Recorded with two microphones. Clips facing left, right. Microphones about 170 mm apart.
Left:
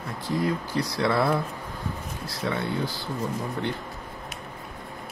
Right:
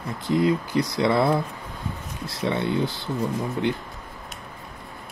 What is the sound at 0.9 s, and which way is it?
Speech, 20° right (ahead or behind).